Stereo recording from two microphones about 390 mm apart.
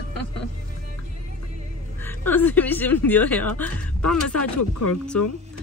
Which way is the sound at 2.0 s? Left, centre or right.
Centre.